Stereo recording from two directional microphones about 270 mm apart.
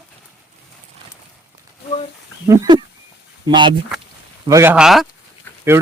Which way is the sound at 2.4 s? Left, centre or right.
Centre.